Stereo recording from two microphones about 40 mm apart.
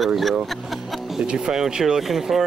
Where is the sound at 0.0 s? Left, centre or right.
Centre.